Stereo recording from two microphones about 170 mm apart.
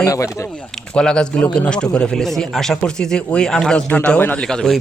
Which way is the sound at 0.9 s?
5° left (ahead or behind).